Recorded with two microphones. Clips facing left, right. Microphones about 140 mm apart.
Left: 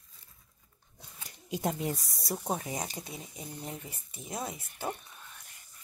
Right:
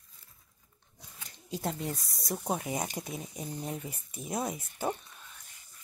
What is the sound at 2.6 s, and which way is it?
Speech, 10° right (ahead or behind).